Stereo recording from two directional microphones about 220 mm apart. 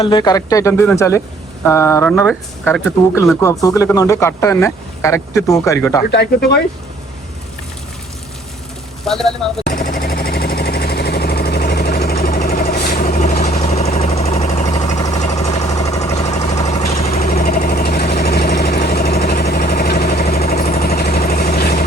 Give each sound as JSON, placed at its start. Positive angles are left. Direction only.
{"t": 0.0, "sound": "speech", "side_deg": 20}
{"t": 6.1, "sound": "speech", "side_deg": 50}
{"t": 9.0, "sound": "speech", "side_deg": 0}
{"t": 9.6, "sound": "jackhammer", "side_deg": 40}
{"t": 15.3, "sound": "a sound", "side_deg": 15}
{"t": 16.1, "sound": "a sound", "side_deg": 30}
{"t": 17.2, "sound": "vehicle", "side_deg": 40}